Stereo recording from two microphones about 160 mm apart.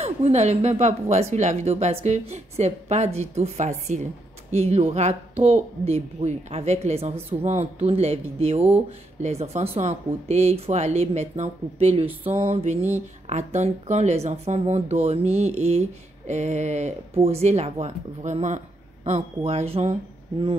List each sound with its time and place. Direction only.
0.0 s a woman's voice: 45° right (ahead or behind)